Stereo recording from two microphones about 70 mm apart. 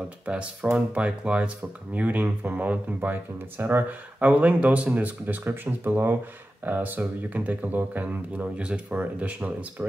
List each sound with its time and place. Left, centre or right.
0.3 s speech: centre